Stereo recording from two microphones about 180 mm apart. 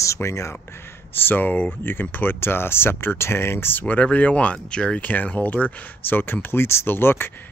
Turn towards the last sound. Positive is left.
turn(degrees=10)  # may be behind; listen again after turning